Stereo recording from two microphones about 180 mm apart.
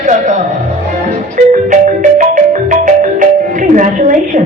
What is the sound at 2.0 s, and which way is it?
Music, 40° right (ahead or behind).